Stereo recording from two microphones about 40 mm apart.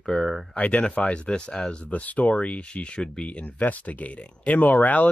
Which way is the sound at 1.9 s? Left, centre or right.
Left.